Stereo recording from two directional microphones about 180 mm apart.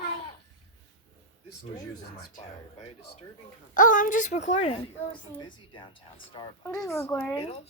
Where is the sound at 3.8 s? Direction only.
45° left (ahead or behind).